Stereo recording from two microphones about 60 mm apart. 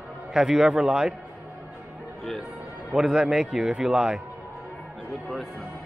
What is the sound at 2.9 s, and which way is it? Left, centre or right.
A man's voice, centre.